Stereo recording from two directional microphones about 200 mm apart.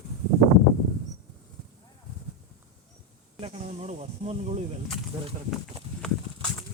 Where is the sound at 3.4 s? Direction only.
30° right (ahead or behind).